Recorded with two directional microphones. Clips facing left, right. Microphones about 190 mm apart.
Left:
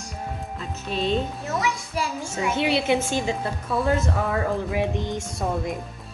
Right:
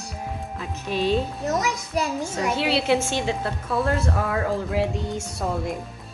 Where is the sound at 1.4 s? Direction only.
40° right (ahead or behind).